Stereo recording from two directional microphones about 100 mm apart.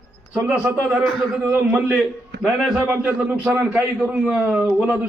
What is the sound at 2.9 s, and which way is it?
Speech, 15° right (ahead or behind).